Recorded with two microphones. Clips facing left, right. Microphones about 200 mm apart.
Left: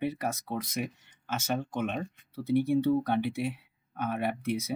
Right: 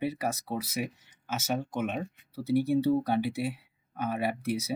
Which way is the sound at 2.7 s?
10° right (ahead or behind).